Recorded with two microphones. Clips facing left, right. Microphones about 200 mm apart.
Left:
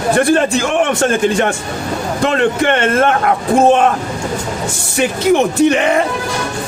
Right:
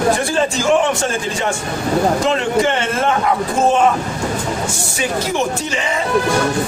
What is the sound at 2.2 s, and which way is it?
Speech, 60° left (ahead or behind).